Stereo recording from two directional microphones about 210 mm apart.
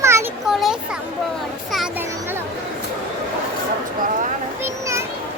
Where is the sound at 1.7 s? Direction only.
5° right (ahead or behind).